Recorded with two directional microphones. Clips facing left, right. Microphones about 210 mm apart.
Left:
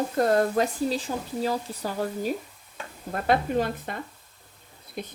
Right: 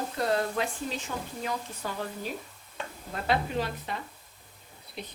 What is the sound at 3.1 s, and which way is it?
Speech, 50° left (ahead or behind).